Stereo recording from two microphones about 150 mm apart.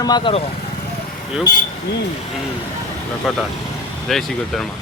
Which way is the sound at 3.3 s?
Centre (ahead or behind).